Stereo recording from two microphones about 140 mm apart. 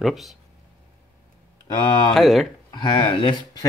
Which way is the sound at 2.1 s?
Centre (ahead or behind).